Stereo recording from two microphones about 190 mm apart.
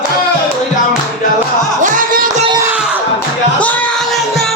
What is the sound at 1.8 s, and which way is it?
Music, 45° right (ahead or behind).